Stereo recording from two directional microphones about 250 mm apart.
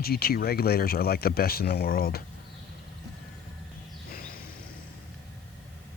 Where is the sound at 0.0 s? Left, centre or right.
Left.